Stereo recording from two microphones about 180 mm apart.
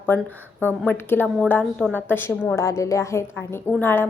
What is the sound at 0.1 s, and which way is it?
A woman's voice, 10° left (ahead or behind).